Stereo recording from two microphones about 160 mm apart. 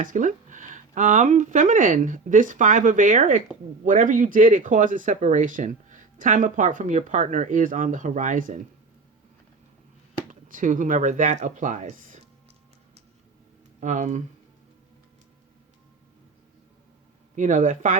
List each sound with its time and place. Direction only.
0.0 s speech: 55° right (ahead or behind)
10.2 s speech: 55° right (ahead or behind)
13.7 s speech: 50° right (ahead or behind)
17.3 s speech: 50° right (ahead or behind)